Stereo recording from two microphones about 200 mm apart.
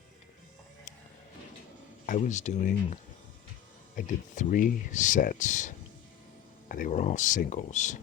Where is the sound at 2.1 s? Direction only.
35° left (ahead or behind).